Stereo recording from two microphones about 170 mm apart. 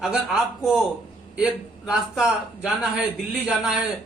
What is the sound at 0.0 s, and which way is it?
A man's voice, centre (ahead or behind).